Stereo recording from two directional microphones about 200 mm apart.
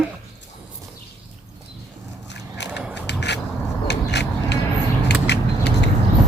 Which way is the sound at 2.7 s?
5° right (ahead or behind).